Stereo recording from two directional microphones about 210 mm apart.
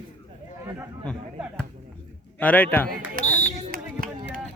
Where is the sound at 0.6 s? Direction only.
15° right (ahead or behind).